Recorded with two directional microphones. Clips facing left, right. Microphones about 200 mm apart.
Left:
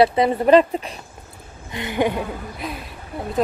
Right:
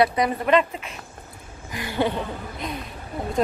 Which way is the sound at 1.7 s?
20° left (ahead or behind).